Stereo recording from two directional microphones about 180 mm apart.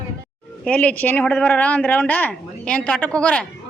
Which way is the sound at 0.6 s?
5° left (ahead or behind).